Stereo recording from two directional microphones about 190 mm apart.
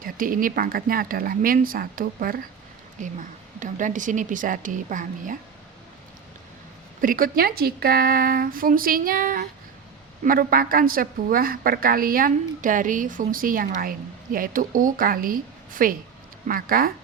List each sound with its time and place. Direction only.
0.0 s a woman's voice: 45° right (ahead or behind)
7.0 s a woman's voice: 50° right (ahead or behind)